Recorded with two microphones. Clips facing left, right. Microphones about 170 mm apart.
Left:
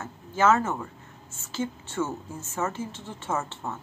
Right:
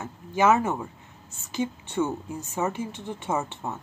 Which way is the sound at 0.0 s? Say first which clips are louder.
Right 1 dB; 15° right (ahead or behind).